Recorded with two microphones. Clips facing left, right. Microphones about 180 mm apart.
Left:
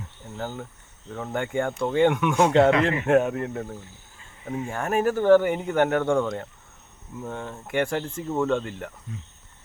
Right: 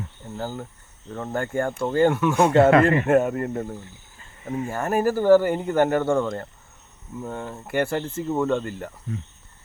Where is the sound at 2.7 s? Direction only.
50° right (ahead or behind).